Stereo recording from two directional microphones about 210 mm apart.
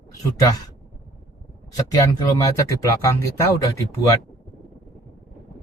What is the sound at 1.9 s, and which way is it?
Speech, 15° left (ahead or behind).